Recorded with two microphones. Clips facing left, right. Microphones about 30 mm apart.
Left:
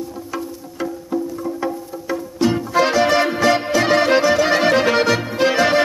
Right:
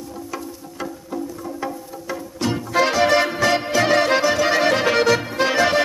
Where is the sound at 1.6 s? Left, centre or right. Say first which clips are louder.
Left 4 dB; centre.